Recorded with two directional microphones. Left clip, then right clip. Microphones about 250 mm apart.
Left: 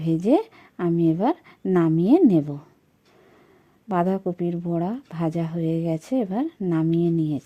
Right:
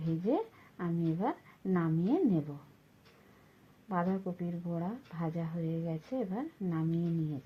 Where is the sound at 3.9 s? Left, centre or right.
Left.